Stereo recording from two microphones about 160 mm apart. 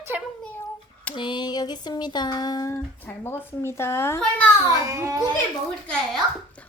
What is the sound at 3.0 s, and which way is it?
A woman's voice, 10° left (ahead or behind).